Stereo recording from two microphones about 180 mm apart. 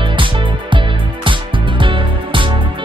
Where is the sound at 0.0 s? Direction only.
30° right (ahead or behind).